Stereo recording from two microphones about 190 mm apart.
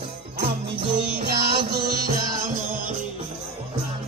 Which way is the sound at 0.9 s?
60° right (ahead or behind).